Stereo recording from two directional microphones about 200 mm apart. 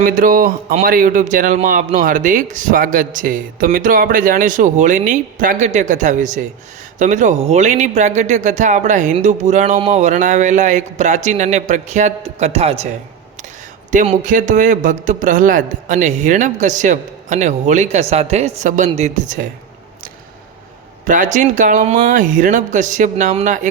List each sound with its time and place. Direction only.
0.0 s speech: 45° right (ahead or behind)
13.9 s speech: 35° right (ahead or behind)
21.1 s speech: 40° right (ahead or behind)